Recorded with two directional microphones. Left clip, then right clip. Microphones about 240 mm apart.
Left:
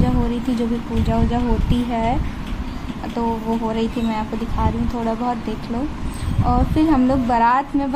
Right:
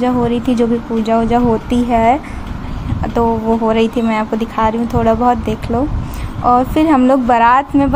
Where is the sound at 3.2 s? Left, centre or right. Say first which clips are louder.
Right 9 dB; right.